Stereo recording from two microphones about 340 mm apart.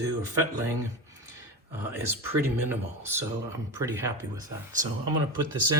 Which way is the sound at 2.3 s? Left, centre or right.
Centre.